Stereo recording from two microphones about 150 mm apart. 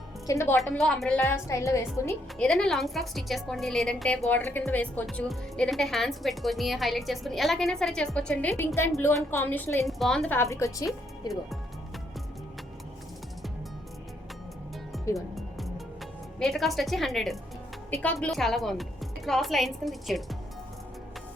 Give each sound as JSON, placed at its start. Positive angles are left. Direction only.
{"t": 0.3, "sound": "a woman's voice", "side_deg": 20}
{"t": 0.7, "sound": "speech", "side_deg": 5}
{"t": 1.2, "sound": "a woman's voice", "side_deg": 20}
{"t": 2.4, "sound": "a woman's voice", "side_deg": 5}
{"t": 9.8, "sound": "a woman's voice", "side_deg": 0}
{"t": 15.1, "sound": "music", "side_deg": 0}
{"t": 16.4, "sound": "speech", "side_deg": 0}